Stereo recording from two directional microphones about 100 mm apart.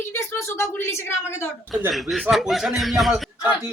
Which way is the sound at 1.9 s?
Centre (ahead or behind).